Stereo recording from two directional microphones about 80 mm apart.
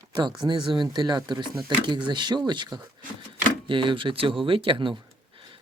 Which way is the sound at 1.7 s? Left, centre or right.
Right.